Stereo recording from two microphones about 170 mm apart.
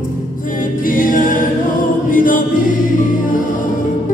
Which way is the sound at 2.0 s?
50° left (ahead or behind).